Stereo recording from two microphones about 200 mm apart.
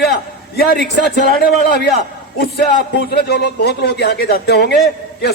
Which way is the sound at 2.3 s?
55° left (ahead or behind).